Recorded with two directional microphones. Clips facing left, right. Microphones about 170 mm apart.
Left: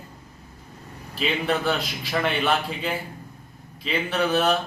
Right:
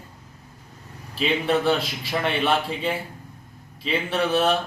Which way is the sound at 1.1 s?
Centre (ahead or behind).